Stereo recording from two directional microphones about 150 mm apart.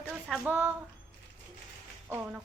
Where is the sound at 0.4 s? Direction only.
15° right (ahead or behind).